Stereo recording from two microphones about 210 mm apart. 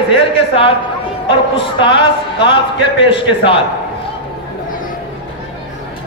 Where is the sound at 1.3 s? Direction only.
25° left (ahead or behind).